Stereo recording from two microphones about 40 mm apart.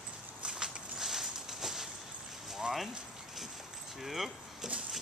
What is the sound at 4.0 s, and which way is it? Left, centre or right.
Speech, centre.